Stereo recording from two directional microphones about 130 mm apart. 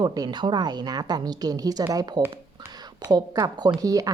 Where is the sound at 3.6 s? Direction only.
30° right (ahead or behind).